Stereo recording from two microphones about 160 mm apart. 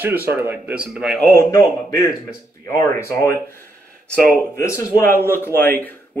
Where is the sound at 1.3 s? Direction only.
20° left (ahead or behind).